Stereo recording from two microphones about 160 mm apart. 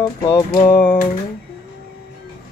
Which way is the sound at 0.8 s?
10° left (ahead or behind).